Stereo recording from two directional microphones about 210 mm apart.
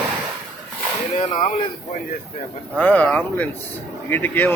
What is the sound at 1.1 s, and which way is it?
Speech, 35° left (ahead or behind).